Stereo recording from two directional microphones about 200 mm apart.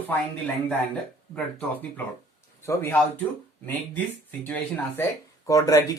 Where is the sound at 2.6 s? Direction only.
15° left (ahead or behind).